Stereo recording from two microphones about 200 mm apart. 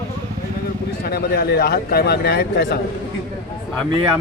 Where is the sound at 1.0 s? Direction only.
50° left (ahead or behind).